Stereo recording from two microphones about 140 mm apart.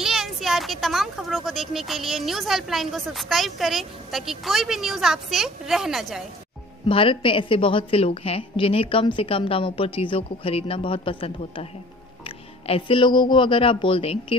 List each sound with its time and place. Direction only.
0.0 s speech: 5° right (ahead or behind)
6.9 s a woman's voice: 40° left (ahead or behind)
12.6 s a woman's voice: 40° left (ahead or behind)